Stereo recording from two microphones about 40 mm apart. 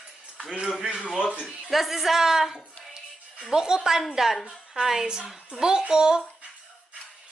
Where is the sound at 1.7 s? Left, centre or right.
Centre.